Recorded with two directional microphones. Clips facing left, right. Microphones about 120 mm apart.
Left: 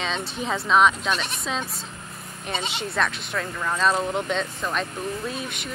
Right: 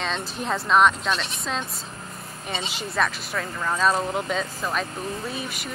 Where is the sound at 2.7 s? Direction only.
Centre (ahead or behind).